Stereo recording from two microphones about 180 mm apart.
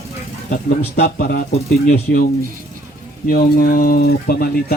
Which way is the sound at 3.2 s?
50° left (ahead or behind).